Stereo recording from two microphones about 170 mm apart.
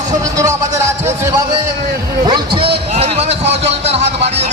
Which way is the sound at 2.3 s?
30° right (ahead or behind).